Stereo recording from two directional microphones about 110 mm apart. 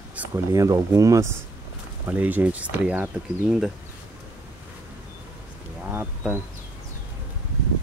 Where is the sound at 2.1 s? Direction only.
15° right (ahead or behind).